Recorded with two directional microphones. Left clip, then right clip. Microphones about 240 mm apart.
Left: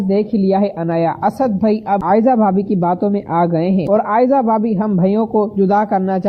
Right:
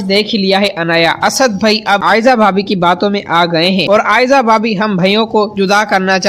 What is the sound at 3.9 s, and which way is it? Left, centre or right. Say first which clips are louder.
Speech: right 3 dB; right.